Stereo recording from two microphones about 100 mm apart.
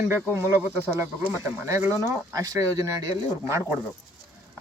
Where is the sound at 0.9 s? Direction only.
30° right (ahead or behind).